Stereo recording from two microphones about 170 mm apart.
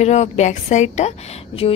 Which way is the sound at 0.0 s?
40° left (ahead or behind).